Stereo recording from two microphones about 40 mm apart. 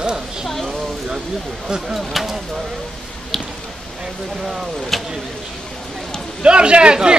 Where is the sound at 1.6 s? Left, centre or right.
Centre.